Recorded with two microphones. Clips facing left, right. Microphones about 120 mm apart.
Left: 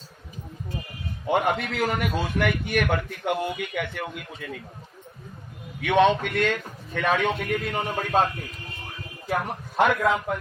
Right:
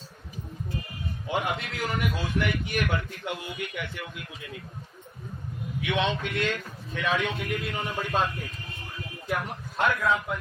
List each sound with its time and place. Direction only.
1.3 s a man's voice: 55° left (ahead or behind)
5.8 s a man's voice: 55° left (ahead or behind)
9.5 s a man's voice: 65° left (ahead or behind)